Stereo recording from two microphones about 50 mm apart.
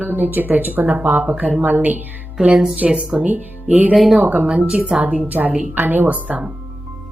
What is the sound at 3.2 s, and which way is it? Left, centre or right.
Speech, right.